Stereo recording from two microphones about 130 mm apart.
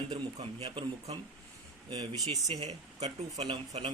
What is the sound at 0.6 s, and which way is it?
Speech, 45° right (ahead or behind).